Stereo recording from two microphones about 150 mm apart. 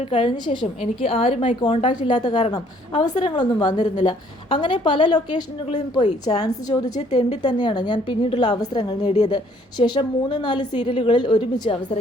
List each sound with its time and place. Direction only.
0.1 s a woman's voice: 35° left (ahead or behind)
7.1 s a woman's voice: 45° left (ahead or behind)
7.4 s a woman's voice: 30° left (ahead or behind)
9.0 s a woman's voice: 45° left (ahead or behind)
9.3 s a woman's voice: 30° left (ahead or behind)